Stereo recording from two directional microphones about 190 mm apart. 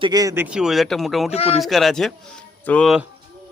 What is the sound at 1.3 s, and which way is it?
Speech, 30° left (ahead or behind).